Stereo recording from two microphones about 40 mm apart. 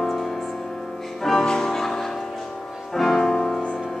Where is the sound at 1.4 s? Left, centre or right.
Centre.